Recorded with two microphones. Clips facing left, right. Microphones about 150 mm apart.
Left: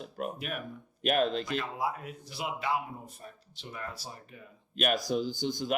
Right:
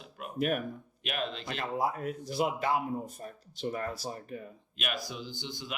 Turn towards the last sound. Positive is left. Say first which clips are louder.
# left 9 dB
turn(degrees=45)  # may be behind; listen again after turning